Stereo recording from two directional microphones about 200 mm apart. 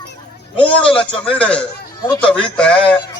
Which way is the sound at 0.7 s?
5° left (ahead or behind).